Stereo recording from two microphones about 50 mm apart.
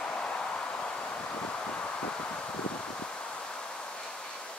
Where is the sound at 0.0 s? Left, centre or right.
Centre.